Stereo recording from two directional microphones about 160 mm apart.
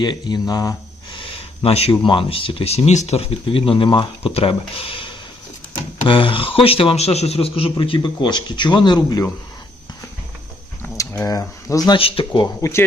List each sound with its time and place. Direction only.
0.0 s speech: 25° left (ahead or behind)
1.2 s speech: 35° left (ahead or behind)
10.8 s a sound: 20° left (ahead or behind)
11.9 s speech: 35° left (ahead or behind)